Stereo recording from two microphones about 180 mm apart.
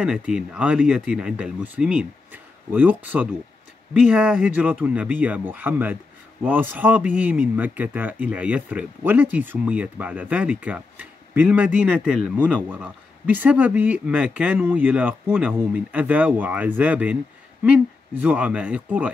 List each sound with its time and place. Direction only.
0.0 s speech: 5° right (ahead or behind)